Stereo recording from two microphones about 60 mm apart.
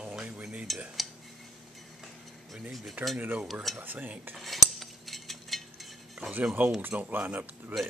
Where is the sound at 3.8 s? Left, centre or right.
Right.